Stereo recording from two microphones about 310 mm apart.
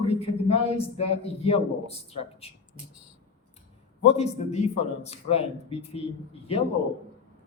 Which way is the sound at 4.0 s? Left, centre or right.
Centre.